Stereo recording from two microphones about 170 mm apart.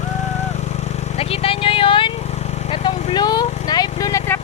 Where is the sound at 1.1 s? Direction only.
35° left (ahead or behind).